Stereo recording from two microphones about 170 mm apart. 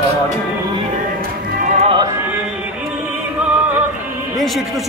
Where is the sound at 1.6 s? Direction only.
50° right (ahead or behind).